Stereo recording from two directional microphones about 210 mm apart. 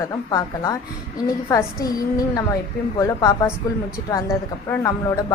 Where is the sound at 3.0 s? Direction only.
15° left (ahead or behind).